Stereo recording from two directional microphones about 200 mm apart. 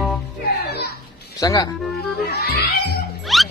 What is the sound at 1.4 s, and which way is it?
Speech, 20° left (ahead or behind).